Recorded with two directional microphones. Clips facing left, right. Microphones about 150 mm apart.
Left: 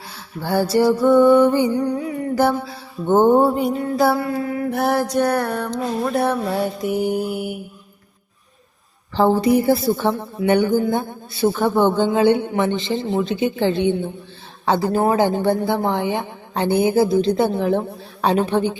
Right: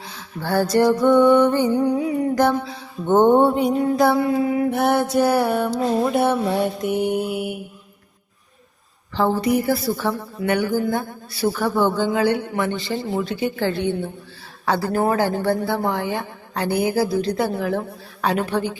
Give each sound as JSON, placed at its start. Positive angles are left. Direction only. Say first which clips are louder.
{"t": 0.1, "sound": "music", "louder": "left 1 dB", "side_deg": 10}
{"t": 1.7, "sound": "a sound", "louder": "right 2 dB", "side_deg": -10}
{"t": 2.3, "sound": "music", "louder": "even", "side_deg": 5}
{"t": 4.2, "sound": "a sound", "louder": "right 4 dB", "side_deg": -20}
{"t": 4.7, "sound": "music", "louder": "right 1 dB", "side_deg": 0}
{"t": 9.1, "sound": "a woman's voice", "louder": "left 4 dB", "side_deg": 30}